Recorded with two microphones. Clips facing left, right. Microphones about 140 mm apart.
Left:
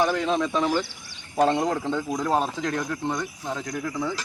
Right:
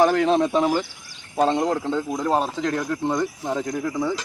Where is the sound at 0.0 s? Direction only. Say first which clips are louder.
Right 5 dB; 45° right (ahead or behind).